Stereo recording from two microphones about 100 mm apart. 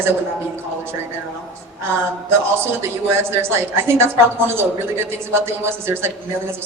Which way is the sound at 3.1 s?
25° right (ahead or behind).